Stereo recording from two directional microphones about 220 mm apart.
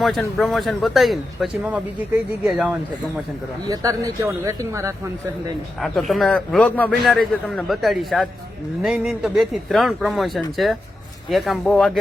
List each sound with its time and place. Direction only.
0.0 s a man's voice: centre (ahead or behind)
3.7 s speech: 15° right (ahead or behind)
5.8 s a man's voice: centre (ahead or behind)